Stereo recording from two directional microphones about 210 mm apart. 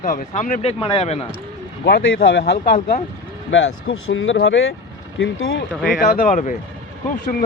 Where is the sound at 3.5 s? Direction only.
65° left (ahead or behind).